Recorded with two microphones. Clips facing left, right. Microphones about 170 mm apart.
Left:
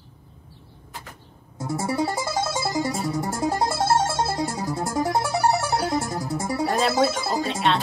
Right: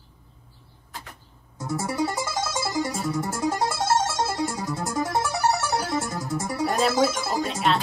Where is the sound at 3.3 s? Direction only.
35° left (ahead or behind).